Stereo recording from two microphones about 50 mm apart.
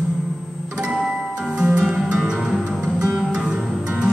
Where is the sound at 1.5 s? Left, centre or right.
Centre.